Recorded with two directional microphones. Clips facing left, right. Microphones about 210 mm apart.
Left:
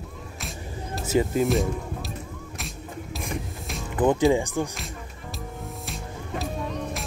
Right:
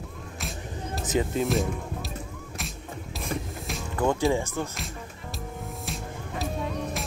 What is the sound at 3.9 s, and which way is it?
Music, 20° left (ahead or behind).